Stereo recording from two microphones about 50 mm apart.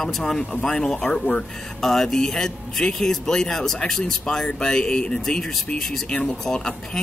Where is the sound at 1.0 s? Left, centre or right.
Left.